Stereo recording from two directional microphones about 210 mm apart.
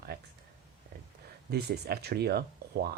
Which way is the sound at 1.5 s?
50° right (ahead or behind).